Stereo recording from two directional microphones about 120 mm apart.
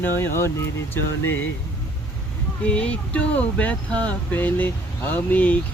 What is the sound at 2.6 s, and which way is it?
Speech, 10° left (ahead or behind).